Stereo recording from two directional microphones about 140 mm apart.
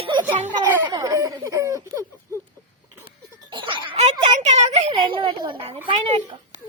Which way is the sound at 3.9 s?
50° right (ahead or behind).